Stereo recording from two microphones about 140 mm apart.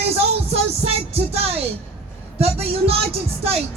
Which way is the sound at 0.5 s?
45° right (ahead or behind).